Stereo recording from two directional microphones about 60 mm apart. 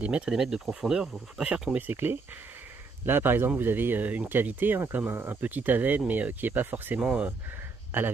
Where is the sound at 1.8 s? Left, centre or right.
Right.